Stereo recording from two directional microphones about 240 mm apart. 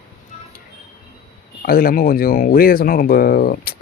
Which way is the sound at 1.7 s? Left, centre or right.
Left.